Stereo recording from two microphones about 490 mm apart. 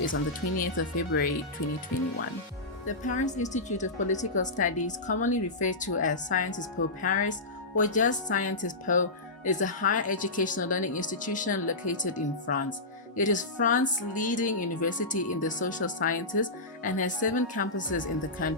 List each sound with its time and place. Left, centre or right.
0.6 s a woman's voice: centre
2.8 s a woman's voice: centre